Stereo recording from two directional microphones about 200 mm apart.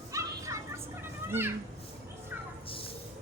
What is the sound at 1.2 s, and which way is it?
Speech, 10° right (ahead or behind).